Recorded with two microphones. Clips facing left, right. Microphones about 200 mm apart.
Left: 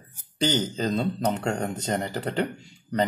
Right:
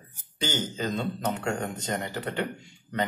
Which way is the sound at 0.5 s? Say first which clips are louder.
Left 4 dB; 35° left (ahead or behind).